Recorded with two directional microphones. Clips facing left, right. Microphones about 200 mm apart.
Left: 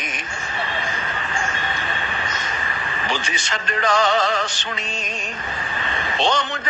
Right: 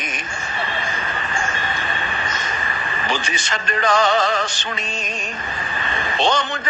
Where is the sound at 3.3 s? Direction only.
45° right (ahead or behind).